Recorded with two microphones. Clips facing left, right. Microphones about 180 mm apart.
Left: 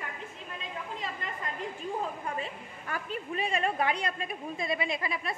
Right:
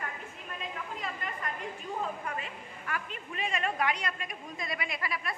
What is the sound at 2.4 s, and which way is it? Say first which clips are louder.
A woman's voice: left 4 dB; 30° left (ahead or behind).